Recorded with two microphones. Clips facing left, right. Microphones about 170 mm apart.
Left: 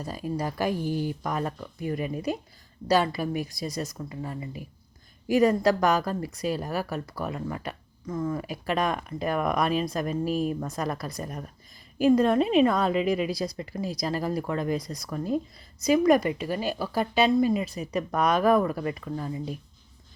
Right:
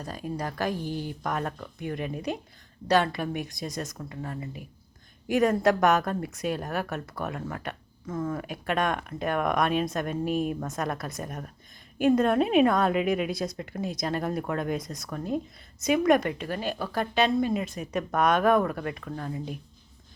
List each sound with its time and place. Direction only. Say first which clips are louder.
0.0 s a woman's voice: left 3 dB; 5° left (ahead or behind)
0.9 s speech: left 4 dB; 45° left (ahead or behind)
1.2 s a woman's voice: left 1 dB; centre (ahead or behind)